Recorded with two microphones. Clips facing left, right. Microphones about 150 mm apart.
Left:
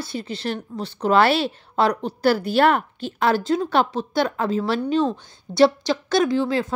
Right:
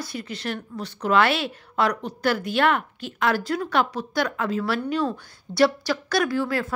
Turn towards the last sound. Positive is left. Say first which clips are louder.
# left 4 dB
turn(degrees=20)  # may be behind; listen again after turning